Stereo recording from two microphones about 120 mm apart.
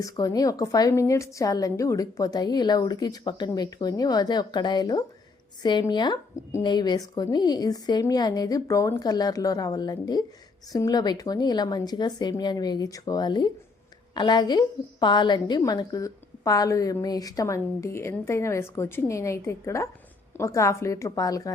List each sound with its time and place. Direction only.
0.0 s a woman's voice: 30° left (ahead or behind)